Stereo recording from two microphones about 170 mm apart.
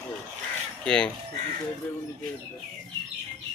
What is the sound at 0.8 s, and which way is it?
Speech, 5° left (ahead or behind).